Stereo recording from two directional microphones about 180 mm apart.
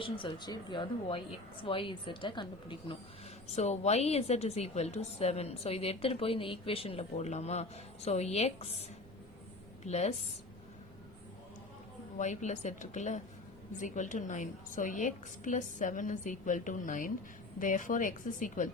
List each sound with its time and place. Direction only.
0.0 s a woman's voice: 25° left (ahead or behind)
3.4 s a woman's voice: 40° left (ahead or behind)
9.8 s a woman's voice: 40° left (ahead or behind)
12.1 s a woman's voice: 40° left (ahead or behind)